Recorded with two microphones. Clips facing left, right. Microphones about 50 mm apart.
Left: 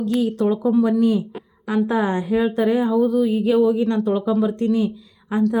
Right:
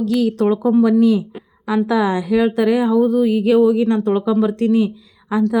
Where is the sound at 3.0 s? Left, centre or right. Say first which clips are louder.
Right 3 dB; right.